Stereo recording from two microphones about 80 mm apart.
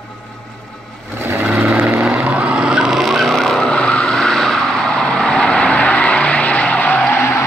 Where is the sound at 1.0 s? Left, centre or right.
Right.